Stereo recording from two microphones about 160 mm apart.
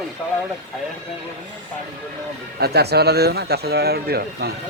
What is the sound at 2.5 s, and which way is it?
Speech, 85° right.